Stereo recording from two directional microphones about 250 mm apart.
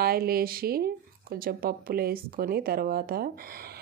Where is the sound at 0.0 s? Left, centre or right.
Right.